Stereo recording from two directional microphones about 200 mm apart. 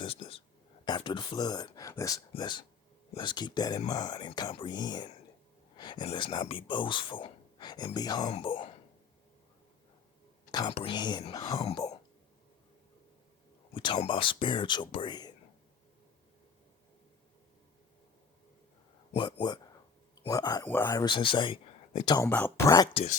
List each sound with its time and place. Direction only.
0.0 s whispering: 25° left (ahead or behind)
0.9 s speech: 25° left (ahead or behind)
10.5 s speech: 25° left (ahead or behind)
13.7 s speech: 25° left (ahead or behind)
19.1 s speech: 20° left (ahead or behind)
22.3 s speech: 10° left (ahead or behind)